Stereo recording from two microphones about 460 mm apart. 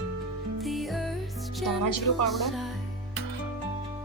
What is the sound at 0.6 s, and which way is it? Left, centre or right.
Music, centre.